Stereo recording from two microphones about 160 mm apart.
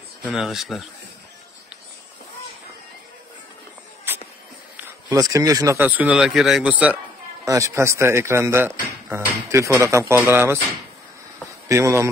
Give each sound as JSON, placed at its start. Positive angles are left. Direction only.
{"t": 0.2, "sound": "speech", "side_deg": 0}
{"t": 4.7, "sound": "speech", "side_deg": -20}
{"t": 7.4, "sound": "speech", "side_deg": -20}
{"t": 11.7, "sound": "speech", "side_deg": -15}